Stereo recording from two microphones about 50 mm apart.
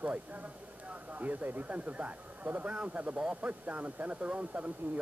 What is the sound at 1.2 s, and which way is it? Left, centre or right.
Speech, right.